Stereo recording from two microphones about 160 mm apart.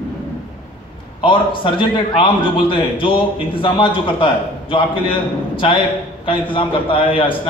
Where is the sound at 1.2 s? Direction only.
30° left (ahead or behind).